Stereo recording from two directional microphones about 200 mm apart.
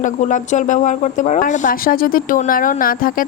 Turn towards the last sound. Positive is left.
turn(degrees=45)  # may be behind; listen again after turning